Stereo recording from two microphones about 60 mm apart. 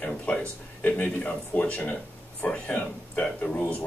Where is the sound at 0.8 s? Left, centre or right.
Left.